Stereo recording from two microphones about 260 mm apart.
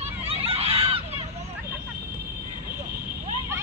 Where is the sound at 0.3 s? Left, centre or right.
Right.